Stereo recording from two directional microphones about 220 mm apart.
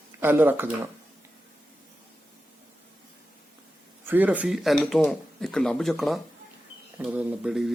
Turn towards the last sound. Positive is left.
turn(degrees=0)  # may be behind; listen again after turning